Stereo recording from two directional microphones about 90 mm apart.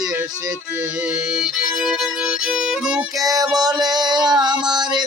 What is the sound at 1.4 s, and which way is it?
Speech, 5° right (ahead or behind).